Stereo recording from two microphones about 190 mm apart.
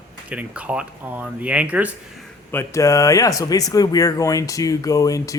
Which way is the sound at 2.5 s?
15° left (ahead or behind).